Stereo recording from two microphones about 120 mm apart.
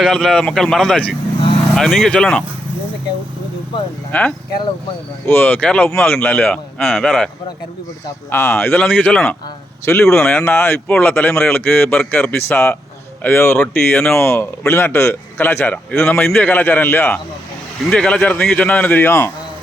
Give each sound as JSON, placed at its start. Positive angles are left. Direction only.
{"t": 0.0, "sound": "speech", "side_deg": 5}
{"t": 4.1, "sound": "a man's voice", "side_deg": 10}
{"t": 6.7, "sound": "speech", "side_deg": 0}
{"t": 8.3, "sound": "a man's voice", "side_deg": 20}
{"t": 10.2, "sound": "a man's voice", "side_deg": 10}
{"t": 14.2, "sound": "a man's voice", "side_deg": 20}